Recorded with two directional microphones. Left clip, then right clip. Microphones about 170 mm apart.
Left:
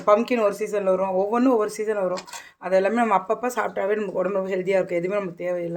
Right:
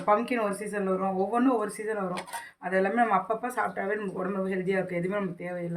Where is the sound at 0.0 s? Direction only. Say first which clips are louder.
Left 7 dB; 50° left (ahead or behind).